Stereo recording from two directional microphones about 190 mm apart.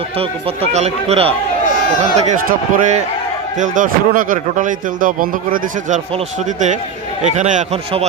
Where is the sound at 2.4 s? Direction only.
45° right (ahead or behind).